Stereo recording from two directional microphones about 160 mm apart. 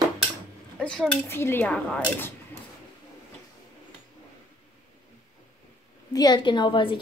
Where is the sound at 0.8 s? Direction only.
5° left (ahead or behind).